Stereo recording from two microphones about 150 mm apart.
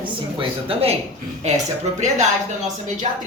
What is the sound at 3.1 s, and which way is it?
Speech, 50° right (ahead or behind).